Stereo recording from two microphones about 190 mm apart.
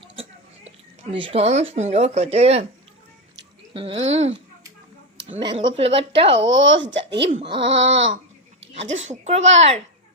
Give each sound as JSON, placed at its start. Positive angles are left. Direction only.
{"t": 0.0, "sound": "a sound", "side_deg": -30}
{"t": 1.1, "sound": "speech", "side_deg": -30}
{"t": 3.8, "sound": "speech", "side_deg": -30}
{"t": 5.4, "sound": "speech", "side_deg": -25}
{"t": 6.3, "sound": "speech", "side_deg": -75}
{"t": 7.6, "sound": "a sound", "side_deg": -75}
{"t": 8.7, "sound": "speech", "side_deg": -35}